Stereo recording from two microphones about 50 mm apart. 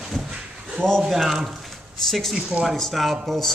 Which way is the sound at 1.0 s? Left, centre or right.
Centre.